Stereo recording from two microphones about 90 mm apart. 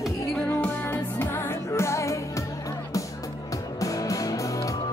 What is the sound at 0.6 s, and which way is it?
Music, 25° left (ahead or behind).